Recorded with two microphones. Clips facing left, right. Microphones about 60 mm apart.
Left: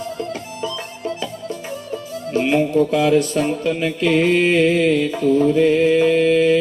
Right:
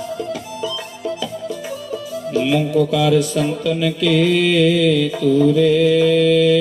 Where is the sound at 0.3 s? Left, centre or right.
Left.